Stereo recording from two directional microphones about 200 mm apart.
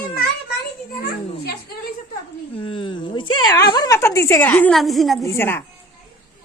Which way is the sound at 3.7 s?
20° left (ahead or behind).